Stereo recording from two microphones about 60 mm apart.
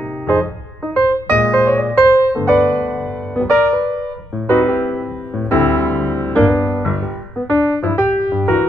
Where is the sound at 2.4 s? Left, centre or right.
Left.